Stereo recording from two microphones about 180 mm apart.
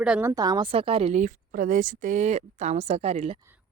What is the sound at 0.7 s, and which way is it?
Speech, 30° right (ahead or behind).